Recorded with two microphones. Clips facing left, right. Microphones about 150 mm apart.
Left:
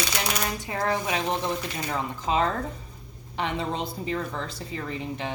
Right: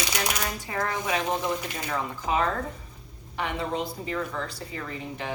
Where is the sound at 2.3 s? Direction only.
25° left (ahead or behind).